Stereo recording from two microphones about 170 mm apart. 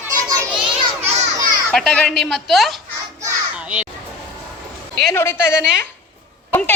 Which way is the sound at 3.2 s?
10° right (ahead or behind).